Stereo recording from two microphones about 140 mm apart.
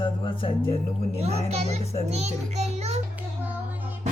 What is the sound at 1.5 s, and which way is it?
A child's voice, 50° right (ahead or behind).